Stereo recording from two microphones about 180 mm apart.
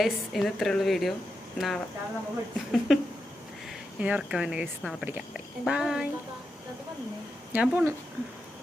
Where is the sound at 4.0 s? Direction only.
5° right (ahead or behind).